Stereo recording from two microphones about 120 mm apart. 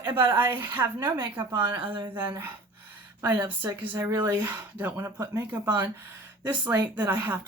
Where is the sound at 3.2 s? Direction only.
20° right (ahead or behind).